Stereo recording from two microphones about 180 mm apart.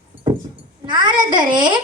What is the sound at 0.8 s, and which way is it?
Speech, 25° right (ahead or behind).